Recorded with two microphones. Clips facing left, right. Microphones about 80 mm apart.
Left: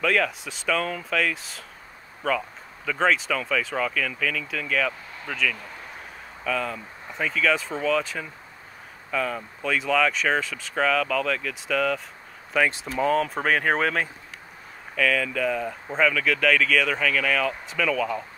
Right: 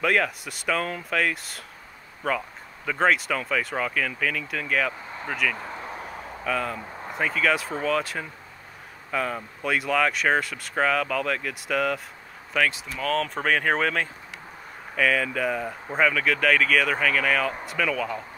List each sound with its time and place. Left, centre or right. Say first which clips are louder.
0.0 s speech: even; centre
5.6 s a sound: right 5 dB; right
6.4 s speech: even; centre
12.7 s speech: left 7 dB; left
13.0 s speech: left 3 dB; centre
15.0 s speech: even; centre